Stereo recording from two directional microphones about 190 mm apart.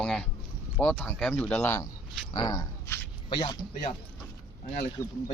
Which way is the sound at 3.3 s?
25° left (ahead or behind).